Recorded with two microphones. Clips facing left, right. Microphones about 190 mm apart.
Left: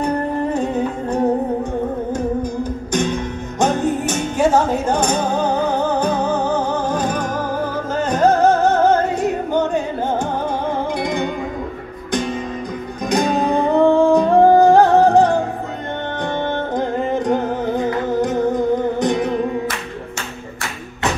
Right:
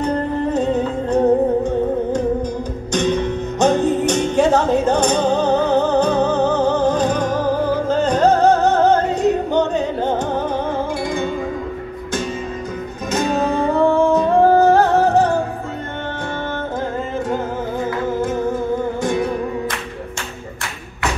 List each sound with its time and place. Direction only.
0.5 s music: 10° left (ahead or behind)
2.9 s music: 10° left (ahead or behind)
13.1 s music: 15° left (ahead or behind)
16.7 s music: 15° left (ahead or behind)